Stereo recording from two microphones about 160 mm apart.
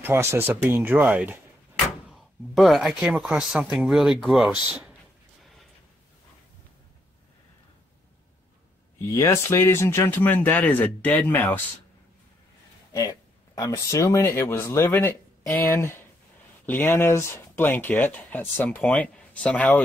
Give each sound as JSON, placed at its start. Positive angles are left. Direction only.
{"t": 0.0, "sound": "speech", "side_deg": -15}
{"t": 9.1, "sound": "speech", "side_deg": 20}
{"t": 13.6, "sound": "speech", "side_deg": 20}